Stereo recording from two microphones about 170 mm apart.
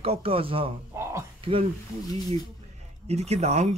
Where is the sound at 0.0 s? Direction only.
35° right (ahead or behind).